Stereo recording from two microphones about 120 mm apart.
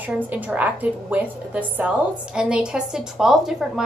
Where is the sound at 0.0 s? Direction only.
15° right (ahead or behind).